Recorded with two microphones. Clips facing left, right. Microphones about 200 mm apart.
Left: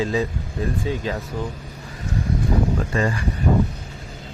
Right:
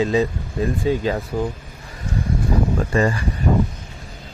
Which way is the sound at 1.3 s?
40° right (ahead or behind).